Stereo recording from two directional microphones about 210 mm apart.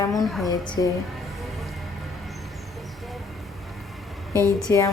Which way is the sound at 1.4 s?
Centre (ahead or behind).